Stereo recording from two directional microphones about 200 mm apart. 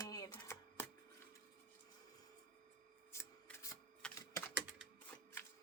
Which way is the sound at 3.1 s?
10° left (ahead or behind).